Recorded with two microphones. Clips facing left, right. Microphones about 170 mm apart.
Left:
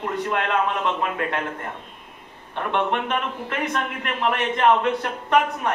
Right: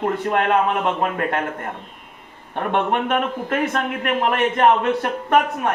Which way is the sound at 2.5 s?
50° right (ahead or behind).